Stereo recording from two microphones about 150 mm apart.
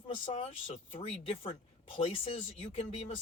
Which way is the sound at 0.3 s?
40° left (ahead or behind).